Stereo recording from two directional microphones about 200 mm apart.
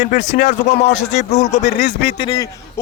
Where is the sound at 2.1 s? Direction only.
20° left (ahead or behind).